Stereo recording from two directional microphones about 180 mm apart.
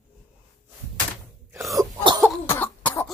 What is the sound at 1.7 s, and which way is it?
Cough, 25° right (ahead or behind).